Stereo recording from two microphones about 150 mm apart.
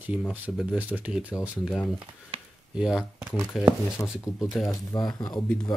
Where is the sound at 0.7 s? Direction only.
10° right (ahead or behind).